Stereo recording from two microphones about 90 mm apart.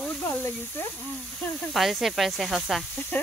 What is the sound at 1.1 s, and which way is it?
Speech, centre (ahead or behind).